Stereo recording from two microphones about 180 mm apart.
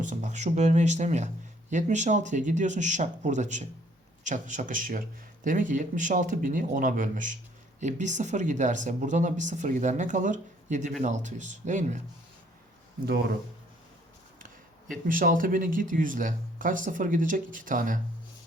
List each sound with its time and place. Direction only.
0.0 s speech: 40° right (ahead or behind)
13.1 s speech: 60° right (ahead or behind)
15.0 s speech: 50° right (ahead or behind)